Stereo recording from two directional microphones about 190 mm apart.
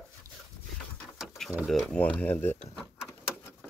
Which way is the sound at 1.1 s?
Centre (ahead or behind).